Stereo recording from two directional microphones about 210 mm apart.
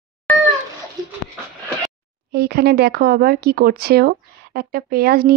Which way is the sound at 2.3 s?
50° right (ahead or behind).